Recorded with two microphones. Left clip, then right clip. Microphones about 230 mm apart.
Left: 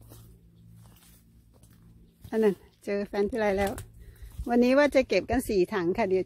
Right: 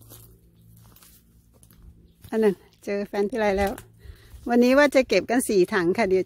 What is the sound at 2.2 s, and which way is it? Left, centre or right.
Speech, centre.